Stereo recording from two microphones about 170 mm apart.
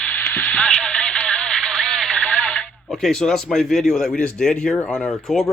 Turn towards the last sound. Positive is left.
turn(degrees=5)  # may be behind; listen again after turning